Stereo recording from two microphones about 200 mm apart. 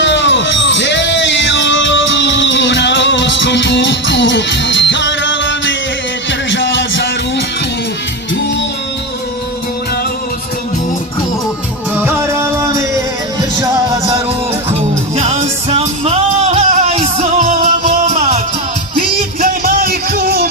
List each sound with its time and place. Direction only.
0.0 s music: 65° left (ahead or behind)
11.9 s music: 10° right (ahead or behind)
14.7 s music: 35° right (ahead or behind); by 20.5 s 50° right (ahead or behind)